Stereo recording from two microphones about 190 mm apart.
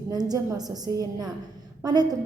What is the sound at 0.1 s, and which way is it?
A woman's voice, 20° right (ahead or behind).